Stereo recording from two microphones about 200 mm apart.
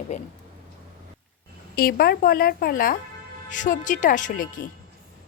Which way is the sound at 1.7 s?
50° left (ahead or behind).